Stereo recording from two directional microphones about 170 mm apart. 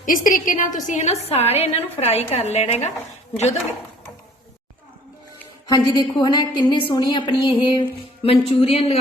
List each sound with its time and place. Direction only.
0.0 s a woman's voice: 50° left (ahead or behind)
5.6 s a woman's voice: 20° left (ahead or behind)